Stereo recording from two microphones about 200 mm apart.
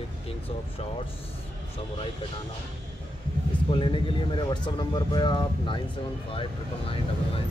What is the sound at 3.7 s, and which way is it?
Speech, 25° left (ahead or behind).